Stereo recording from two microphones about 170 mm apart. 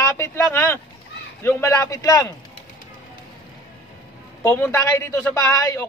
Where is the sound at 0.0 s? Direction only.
15° left (ahead or behind).